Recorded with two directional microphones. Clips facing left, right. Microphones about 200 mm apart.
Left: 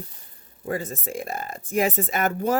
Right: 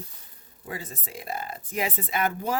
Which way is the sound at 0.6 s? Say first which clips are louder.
Left 9 dB; 45° left (ahead or behind).